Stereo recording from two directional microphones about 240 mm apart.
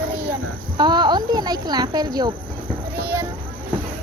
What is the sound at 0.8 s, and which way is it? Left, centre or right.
Speech, centre.